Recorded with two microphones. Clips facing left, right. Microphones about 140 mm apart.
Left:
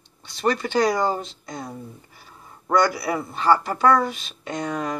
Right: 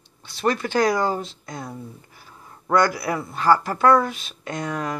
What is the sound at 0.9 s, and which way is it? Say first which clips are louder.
Speech: even; 15° left (ahead or behind).